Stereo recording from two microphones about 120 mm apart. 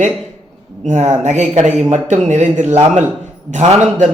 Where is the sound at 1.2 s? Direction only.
75° right (ahead or behind).